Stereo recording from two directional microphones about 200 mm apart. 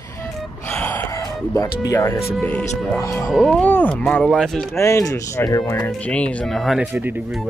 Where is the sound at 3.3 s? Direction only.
Centre (ahead or behind).